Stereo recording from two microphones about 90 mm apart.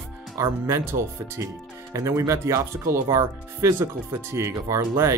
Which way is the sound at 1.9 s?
35° right (ahead or behind).